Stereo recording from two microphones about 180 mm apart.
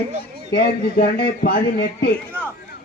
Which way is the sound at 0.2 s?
65° left (ahead or behind).